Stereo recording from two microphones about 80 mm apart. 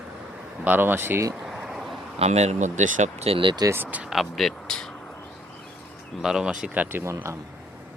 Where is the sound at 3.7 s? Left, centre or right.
Right.